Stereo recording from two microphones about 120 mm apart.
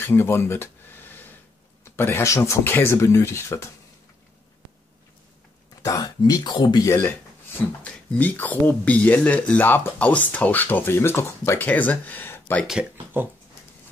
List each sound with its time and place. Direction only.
0.0 s a sound: 20° left (ahead or behind)
2.0 s speech: 20° left (ahead or behind)
5.8 s speech: 30° left (ahead or behind)
6.9 s speech: 15° left (ahead or behind)